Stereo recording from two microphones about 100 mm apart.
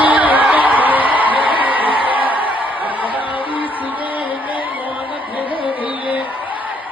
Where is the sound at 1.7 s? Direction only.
60° left (ahead or behind).